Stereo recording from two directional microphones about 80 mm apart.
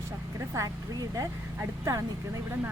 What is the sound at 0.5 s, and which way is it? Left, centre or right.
Speech, right.